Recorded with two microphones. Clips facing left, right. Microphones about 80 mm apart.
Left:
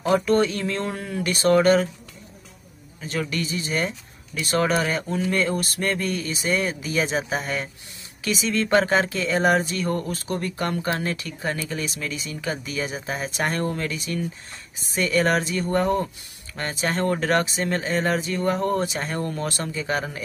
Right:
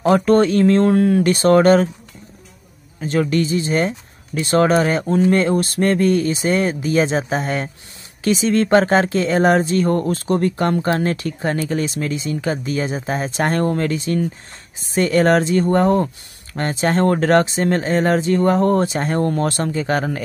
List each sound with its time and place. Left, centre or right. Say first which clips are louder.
0.1 s speech: right 6 dB; right
3.0 s speech: right 9 dB; right